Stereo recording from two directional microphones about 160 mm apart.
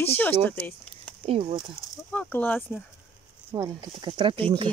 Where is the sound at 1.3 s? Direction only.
35° right (ahead or behind).